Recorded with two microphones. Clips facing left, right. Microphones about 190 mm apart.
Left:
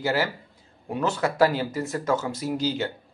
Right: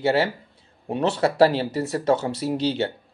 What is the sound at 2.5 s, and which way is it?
Speech, 70° right (ahead or behind).